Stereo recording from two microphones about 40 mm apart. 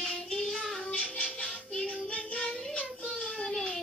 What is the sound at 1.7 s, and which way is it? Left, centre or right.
Child singing, centre.